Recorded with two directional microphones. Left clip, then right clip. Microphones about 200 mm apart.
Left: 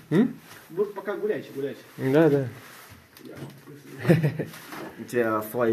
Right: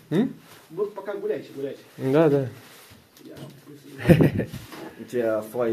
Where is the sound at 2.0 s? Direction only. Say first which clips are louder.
Right 1 dB; 15° right (ahead or behind).